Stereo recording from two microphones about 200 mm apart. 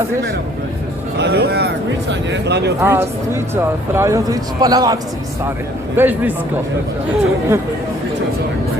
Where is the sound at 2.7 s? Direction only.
10° right (ahead or behind).